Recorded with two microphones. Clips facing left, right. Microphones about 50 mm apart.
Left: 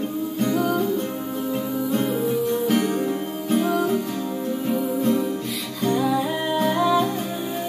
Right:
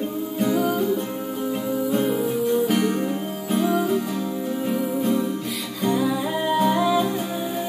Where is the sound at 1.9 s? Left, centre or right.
Centre.